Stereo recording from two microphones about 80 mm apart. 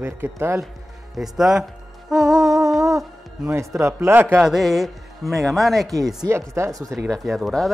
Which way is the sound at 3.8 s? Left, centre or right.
Right.